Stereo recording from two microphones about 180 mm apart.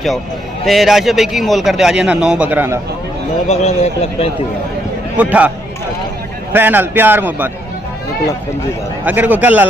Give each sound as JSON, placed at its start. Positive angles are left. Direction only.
{"t": 0.7, "sound": "a man's voice", "side_deg": 0}
{"t": 3.4, "sound": "a man's voice", "side_deg": 35}
{"t": 5.1, "sound": "a man's voice", "side_deg": -10}
{"t": 6.5, "sound": "a man's voice", "side_deg": -10}
{"t": 9.0, "sound": "a man's voice", "side_deg": -10}